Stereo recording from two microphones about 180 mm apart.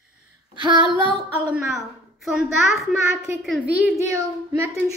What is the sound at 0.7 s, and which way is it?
Female singing, 25° left (ahead or behind).